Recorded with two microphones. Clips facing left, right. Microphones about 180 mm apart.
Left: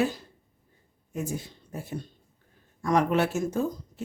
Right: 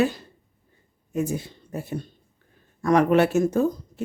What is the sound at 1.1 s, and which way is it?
Speech, 70° right (ahead or behind).